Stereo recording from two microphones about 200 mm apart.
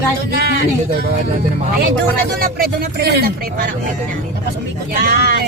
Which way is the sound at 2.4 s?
50° right (ahead or behind).